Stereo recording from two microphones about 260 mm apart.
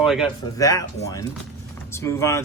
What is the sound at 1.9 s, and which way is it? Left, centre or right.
Speech, centre.